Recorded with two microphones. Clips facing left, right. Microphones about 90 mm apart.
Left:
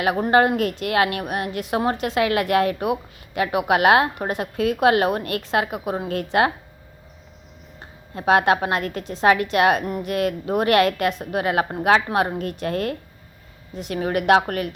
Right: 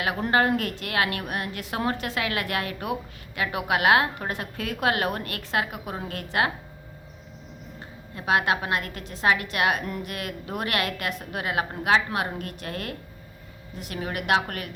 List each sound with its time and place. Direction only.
0.0 s a woman's voice: 25° left (ahead or behind)
2.7 s a woman's voice: 20° left (ahead or behind)
8.1 s a woman's voice: 30° left (ahead or behind)
12.4 s a woman's voice: 30° left (ahead or behind)
13.9 s a woman's voice: 35° left (ahead or behind)